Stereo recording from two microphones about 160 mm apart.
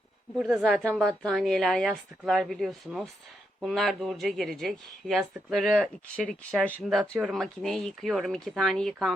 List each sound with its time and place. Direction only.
0.3 s speech: centre (ahead or behind)